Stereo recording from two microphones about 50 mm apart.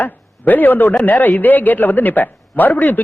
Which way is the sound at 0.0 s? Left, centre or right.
Left.